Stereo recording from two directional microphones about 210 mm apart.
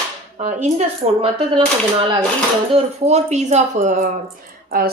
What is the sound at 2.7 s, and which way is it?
A woman's voice, 30° right (ahead or behind).